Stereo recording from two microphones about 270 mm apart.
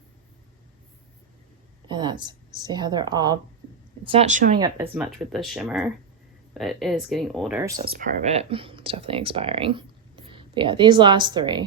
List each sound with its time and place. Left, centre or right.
1.9 s a woman's voice: centre
4.6 s speech: centre
7.9 s speech: right